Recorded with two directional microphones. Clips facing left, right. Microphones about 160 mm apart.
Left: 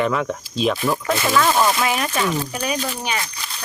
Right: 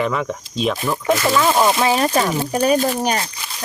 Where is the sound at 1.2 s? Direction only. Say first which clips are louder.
Right 1 dB; 15° right (ahead or behind); by 3.3 s 40° right (ahead or behind).